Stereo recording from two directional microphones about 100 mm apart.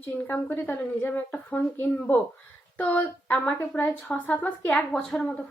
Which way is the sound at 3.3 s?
15° left (ahead or behind).